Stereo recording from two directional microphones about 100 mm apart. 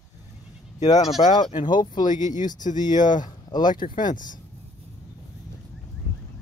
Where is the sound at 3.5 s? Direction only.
45° left (ahead or behind).